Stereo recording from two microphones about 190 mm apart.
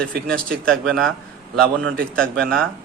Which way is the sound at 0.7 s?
5° left (ahead or behind).